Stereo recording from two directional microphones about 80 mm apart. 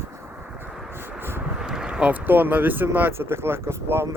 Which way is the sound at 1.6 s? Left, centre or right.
Centre.